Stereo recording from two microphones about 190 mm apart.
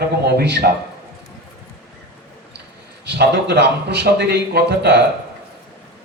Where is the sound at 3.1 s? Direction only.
60° right (ahead or behind).